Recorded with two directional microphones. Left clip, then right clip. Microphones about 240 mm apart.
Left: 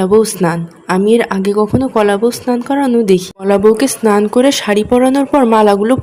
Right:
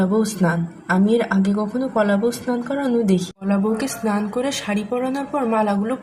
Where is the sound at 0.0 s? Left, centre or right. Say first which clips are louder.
Left 10 dB; left.